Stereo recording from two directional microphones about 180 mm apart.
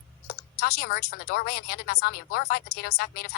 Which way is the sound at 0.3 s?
60° left (ahead or behind).